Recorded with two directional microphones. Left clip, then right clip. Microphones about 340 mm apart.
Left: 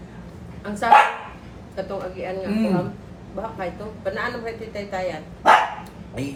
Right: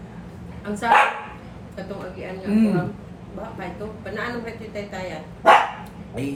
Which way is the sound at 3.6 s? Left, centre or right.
Centre.